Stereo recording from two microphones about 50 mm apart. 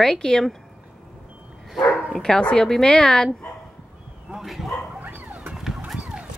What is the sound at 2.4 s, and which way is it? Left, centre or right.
Speech, centre.